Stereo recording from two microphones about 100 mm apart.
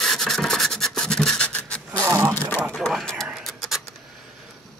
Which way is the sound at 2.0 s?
30° right (ahead or behind).